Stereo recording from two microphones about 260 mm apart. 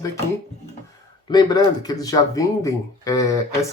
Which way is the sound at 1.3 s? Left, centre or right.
Centre.